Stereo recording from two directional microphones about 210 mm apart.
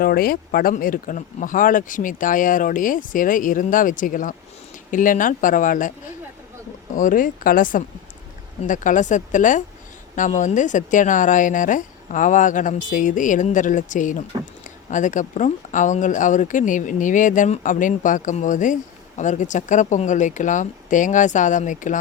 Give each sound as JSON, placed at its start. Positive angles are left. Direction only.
{"t": 0.0, "sound": "speech", "side_deg": 45}
{"t": 6.9, "sound": "speech", "side_deg": 40}